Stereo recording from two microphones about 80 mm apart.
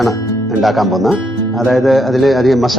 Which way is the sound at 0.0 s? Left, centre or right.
Centre.